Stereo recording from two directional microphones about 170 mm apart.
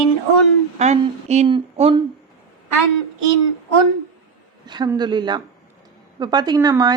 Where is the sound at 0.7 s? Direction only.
40° right (ahead or behind).